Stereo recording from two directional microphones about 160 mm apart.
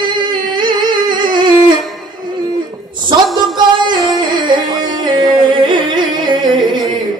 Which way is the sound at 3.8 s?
30° right (ahead or behind).